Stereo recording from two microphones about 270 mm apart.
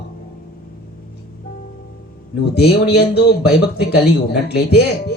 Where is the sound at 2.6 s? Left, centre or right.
Left.